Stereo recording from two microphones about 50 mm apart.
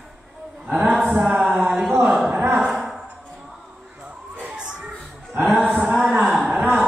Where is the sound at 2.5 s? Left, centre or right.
Centre.